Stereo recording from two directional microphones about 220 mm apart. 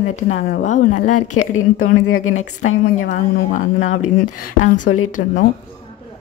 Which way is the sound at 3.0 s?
35° left (ahead or behind).